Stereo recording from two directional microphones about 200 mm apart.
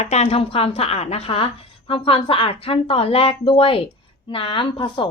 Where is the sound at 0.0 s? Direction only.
35° left (ahead or behind).